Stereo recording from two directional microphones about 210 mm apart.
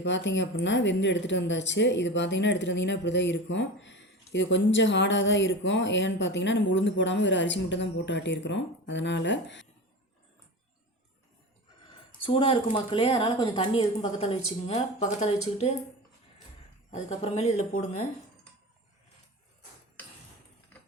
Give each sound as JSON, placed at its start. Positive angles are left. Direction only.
{"t": 0.0, "sound": "a woman's voice", "side_deg": 60}
{"t": 12.2, "sound": "a woman's voice", "side_deg": 25}
{"t": 16.9, "sound": "speech", "side_deg": 30}